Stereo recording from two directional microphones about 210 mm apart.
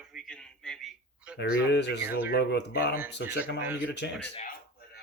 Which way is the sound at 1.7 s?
55° left (ahead or behind).